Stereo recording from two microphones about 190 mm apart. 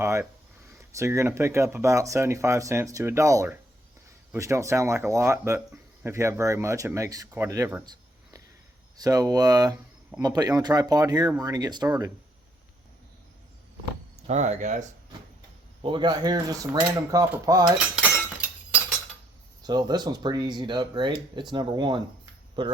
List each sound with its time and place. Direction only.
0.0 s speech: 15° right (ahead or behind)
9.0 s speech: 20° right (ahead or behind)
14.3 s speech: 35° right (ahead or behind)
15.8 s speech: 25° right (ahead or behind)
17.7 s cutlery: 5° right (ahead or behind)
19.6 s speech: 20° right (ahead or behind)